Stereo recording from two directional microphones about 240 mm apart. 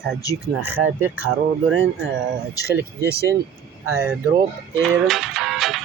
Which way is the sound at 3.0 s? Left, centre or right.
Right.